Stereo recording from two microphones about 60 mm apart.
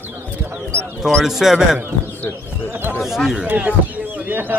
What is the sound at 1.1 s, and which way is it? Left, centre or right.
Speech, centre.